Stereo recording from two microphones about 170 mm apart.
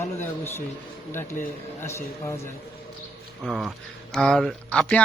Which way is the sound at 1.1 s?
15° left (ahead or behind).